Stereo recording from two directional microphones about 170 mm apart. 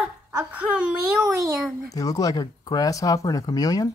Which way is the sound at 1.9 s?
20° left (ahead or behind).